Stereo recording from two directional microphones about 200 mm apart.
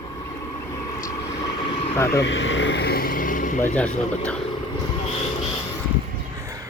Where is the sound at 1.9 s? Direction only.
15° left (ahead or behind).